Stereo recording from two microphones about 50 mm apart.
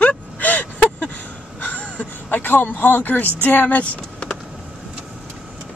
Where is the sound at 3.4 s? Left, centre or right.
Left.